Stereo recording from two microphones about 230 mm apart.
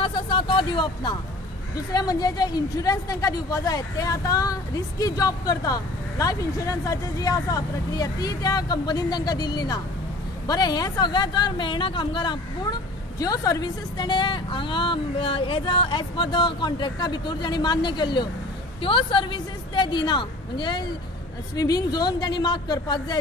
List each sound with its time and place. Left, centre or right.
0.0 s music: left
2.0 s a woman's voice: centre